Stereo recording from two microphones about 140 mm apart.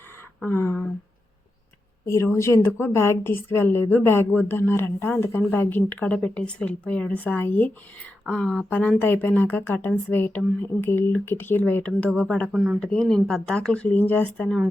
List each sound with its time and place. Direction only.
0.4 s a woman's voice: 15° left (ahead or behind)
2.0 s a woman's voice: 20° left (ahead or behind)
12.5 s speech: centre (ahead or behind)